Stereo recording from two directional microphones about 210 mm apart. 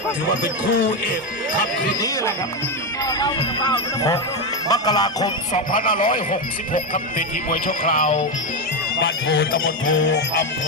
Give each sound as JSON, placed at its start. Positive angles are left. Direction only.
{"t": 0.4, "sound": "speech", "side_deg": 40}
{"t": 1.9, "sound": "speech", "side_deg": 20}
{"t": 5.5, "sound": "speech", "side_deg": 40}
{"t": 7.9, "sound": "music", "side_deg": 30}
{"t": 9.3, "sound": "a sound", "side_deg": 45}
{"t": 10.0, "sound": "music", "side_deg": 60}